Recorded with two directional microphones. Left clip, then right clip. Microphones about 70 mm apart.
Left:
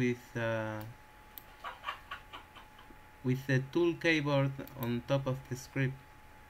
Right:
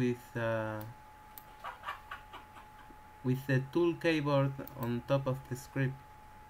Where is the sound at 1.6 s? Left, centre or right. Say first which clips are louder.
Left 1 dB; left.